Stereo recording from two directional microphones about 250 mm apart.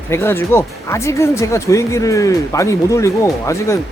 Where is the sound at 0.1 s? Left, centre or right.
Centre.